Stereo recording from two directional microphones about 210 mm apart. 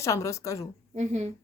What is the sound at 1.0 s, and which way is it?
Speech, 35° right (ahead or behind).